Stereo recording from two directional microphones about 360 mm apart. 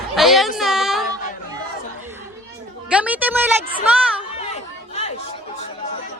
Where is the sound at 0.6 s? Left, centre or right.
Centre.